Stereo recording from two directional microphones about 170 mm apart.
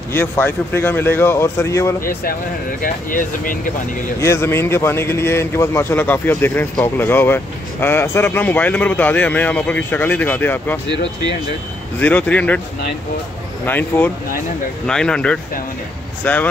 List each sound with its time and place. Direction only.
0.1 s a man's voice: 15° left (ahead or behind)
2.8 s speech: 55° left (ahead or behind)
4.2 s a man's voice: 15° left (ahead or behind)
12.0 s a man's voice: 10° left (ahead or behind)
13.7 s a man's voice: 10° left (ahead or behind)